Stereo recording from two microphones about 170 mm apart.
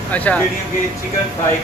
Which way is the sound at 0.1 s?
10° left (ahead or behind).